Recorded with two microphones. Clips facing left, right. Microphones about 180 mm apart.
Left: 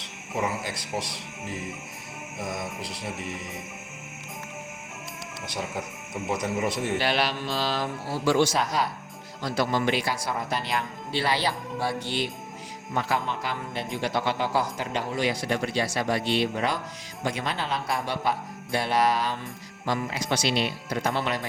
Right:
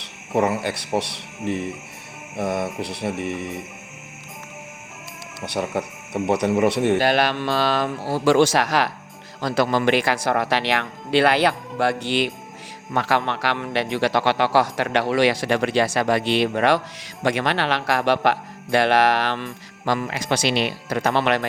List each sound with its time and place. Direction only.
0.0 s speech: 65° right (ahead or behind)
2.4 s music: 65° right (ahead or behind)
5.5 s speech: 65° right (ahead or behind)
7.0 s speech: 50° right (ahead or behind); by 11.5 s 65° right (ahead or behind)
12.9 s speech: 80° right